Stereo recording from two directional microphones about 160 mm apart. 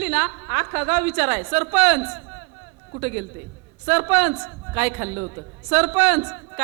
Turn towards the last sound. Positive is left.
turn(degrees=-10)  # may be behind; listen again after turning